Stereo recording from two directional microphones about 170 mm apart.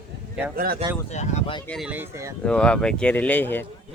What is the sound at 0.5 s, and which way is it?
Speech, 60° right (ahead or behind).